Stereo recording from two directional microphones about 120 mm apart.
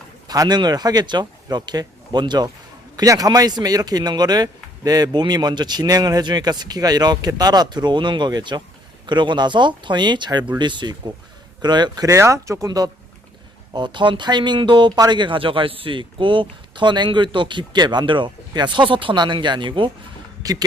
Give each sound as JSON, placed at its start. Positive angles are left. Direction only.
{"t": 0.3, "sound": "speech", "side_deg": -35}
{"t": 20.4, "sound": "speech", "side_deg": -30}